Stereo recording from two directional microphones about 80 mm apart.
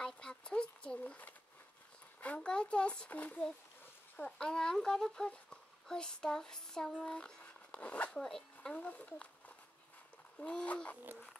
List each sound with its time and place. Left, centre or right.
0.0 s a sound: centre
2.2 s speech: centre
4.2 s speech: centre
10.4 s speech: centre